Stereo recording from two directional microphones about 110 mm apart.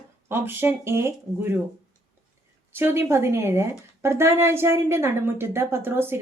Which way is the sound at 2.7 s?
20° right (ahead or behind).